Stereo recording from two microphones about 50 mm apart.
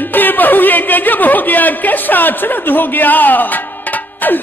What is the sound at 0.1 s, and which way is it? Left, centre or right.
A man's voice, left.